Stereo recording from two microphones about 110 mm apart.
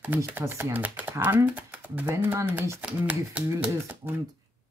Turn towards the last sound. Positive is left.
turn(degrees=-20)  # may be behind; listen again after turning